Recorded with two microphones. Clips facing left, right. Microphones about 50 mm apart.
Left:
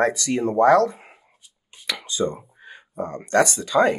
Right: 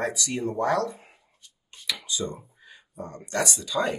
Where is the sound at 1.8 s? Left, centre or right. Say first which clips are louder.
Left 6 dB; left.